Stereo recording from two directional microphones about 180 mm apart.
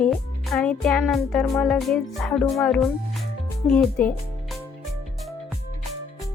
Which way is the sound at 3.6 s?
5° left (ahead or behind).